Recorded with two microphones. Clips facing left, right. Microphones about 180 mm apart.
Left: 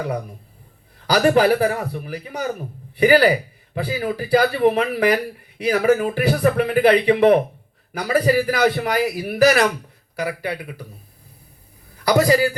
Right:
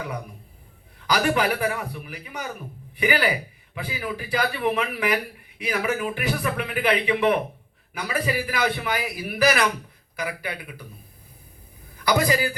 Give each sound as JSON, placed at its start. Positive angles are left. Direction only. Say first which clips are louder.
{"t": 0.9, "sound": "speech", "louder": "left 7 dB", "side_deg": 35}
{"t": 12.0, "sound": "speech", "louder": "left 6 dB", "side_deg": 40}